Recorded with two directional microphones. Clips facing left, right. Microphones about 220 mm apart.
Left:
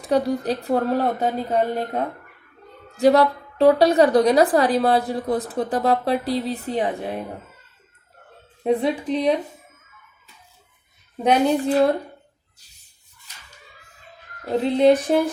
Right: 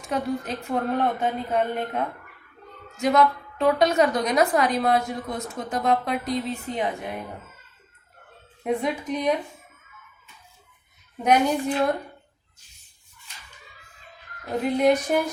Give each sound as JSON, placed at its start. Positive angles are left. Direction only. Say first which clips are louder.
{"t": 0.0, "sound": "a woman's voice", "louder": "left 6 dB", "side_deg": 35}
{"t": 8.6, "sound": "a woman's voice", "louder": "left 5 dB", "side_deg": 30}
{"t": 11.2, "sound": "a woman's voice", "louder": "left 3 dB", "side_deg": 30}
{"t": 14.4, "sound": "speech", "louder": "left 4 dB", "side_deg": 30}